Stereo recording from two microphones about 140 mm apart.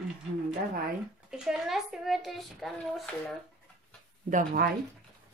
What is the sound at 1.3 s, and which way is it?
Speech, 5° right (ahead or behind).